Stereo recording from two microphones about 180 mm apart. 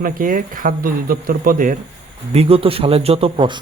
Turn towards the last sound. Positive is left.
turn(degrees=-25)  # may be behind; listen again after turning